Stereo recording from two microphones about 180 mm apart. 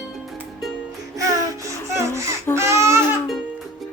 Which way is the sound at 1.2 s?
20° right (ahead or behind).